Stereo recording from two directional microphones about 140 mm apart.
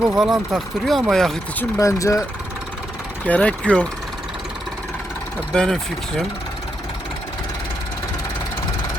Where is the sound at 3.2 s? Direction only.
10° left (ahead or behind).